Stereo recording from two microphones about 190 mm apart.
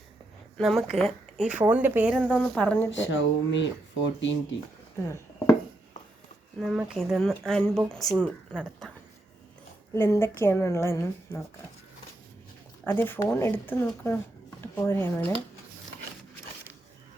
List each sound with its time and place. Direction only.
0.6 s speech: centre (ahead or behind)
2.2 s a woman's voice: 5° left (ahead or behind)
2.9 s speech: 75° left (ahead or behind)
5.0 s dishes: 15° left (ahead or behind)
6.6 s speech: centre (ahead or behind)
9.9 s a woman's voice: 15° left (ahead or behind)
12.8 s a woman's voice: 10° left (ahead or behind)